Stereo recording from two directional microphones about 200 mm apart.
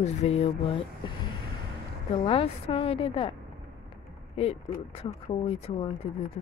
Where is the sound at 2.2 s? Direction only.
25° left (ahead or behind).